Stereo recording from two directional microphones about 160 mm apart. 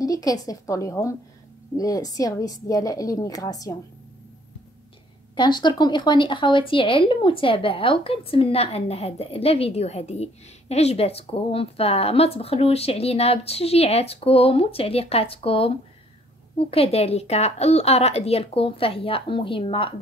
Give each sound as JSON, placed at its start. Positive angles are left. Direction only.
{"t": 0.0, "sound": "a woman's voice", "side_deg": 20}
{"t": 5.3, "sound": "speech", "side_deg": 30}